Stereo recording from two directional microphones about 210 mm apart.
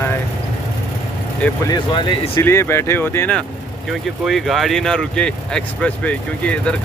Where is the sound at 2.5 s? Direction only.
10° left (ahead or behind).